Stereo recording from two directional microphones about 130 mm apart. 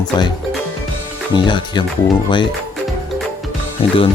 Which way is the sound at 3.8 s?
45° left (ahead or behind).